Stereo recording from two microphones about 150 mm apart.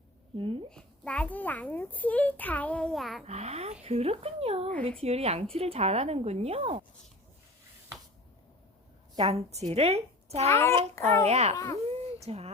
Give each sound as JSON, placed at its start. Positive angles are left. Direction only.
{"t": 0.3, "sound": "speech", "side_deg": -35}
{"t": 0.7, "sound": "a child's voice", "side_deg": 5}
{"t": 3.2, "sound": "a woman's voice", "side_deg": -45}
{"t": 9.2, "sound": "a woman's voice", "side_deg": -45}
{"t": 10.5, "sound": "a child's voice", "side_deg": 15}
{"t": 11.3, "sound": "a woman's voice", "side_deg": -50}
{"t": 11.5, "sound": "a child's voice", "side_deg": 20}
{"t": 12.2, "sound": "speech", "side_deg": -45}